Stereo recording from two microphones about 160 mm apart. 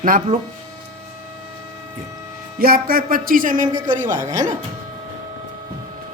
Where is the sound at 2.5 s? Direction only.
65° right (ahead or behind).